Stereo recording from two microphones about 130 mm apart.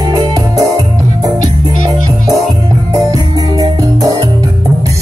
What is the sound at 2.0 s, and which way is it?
Music, 25° right (ahead or behind).